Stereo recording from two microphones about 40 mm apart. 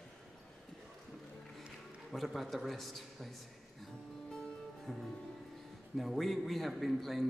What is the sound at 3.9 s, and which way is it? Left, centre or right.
Music, centre.